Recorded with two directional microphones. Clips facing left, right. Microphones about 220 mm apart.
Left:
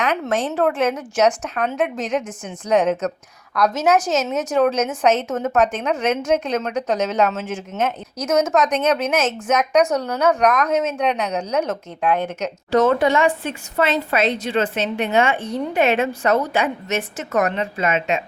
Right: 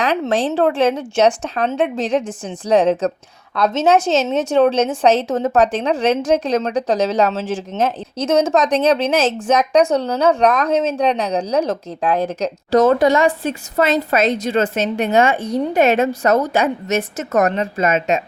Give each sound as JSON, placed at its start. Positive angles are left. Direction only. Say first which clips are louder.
{"t": 0.0, "sound": "a woman's voice", "louder": "right 3 dB", "side_deg": -30}